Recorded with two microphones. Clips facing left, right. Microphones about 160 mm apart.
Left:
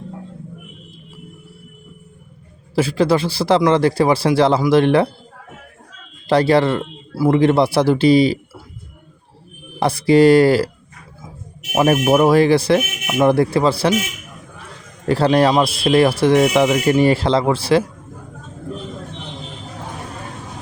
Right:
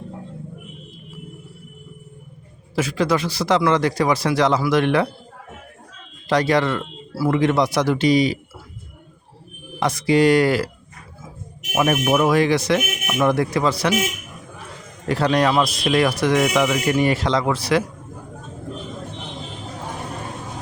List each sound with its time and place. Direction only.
2.7 s a man's voice: 30° left (ahead or behind)
6.2 s speech: 30° left (ahead or behind)
9.8 s speech: 30° left (ahead or behind)
11.7 s speech: 30° left (ahead or behind)
15.0 s speech: 30° left (ahead or behind)